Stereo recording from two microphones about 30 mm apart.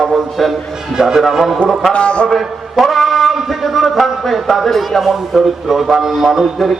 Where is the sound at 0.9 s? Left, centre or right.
Right.